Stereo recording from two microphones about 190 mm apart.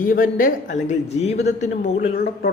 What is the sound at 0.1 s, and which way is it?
Speech, 50° left (ahead or behind).